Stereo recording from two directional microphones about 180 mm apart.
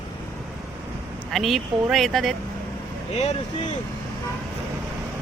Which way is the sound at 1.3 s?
Centre (ahead or behind).